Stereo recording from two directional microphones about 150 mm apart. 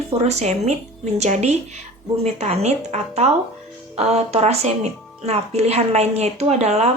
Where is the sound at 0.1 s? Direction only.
45° right (ahead or behind).